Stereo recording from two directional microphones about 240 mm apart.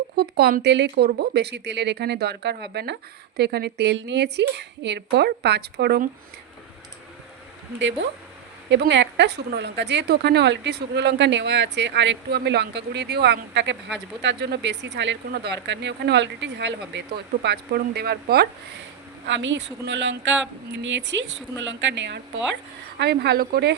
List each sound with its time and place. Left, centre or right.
0.2 s a woman's voice: right
8.0 s a woman's voice: right